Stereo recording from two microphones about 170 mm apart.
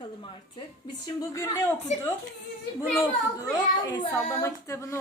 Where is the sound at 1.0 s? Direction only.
20° left (ahead or behind).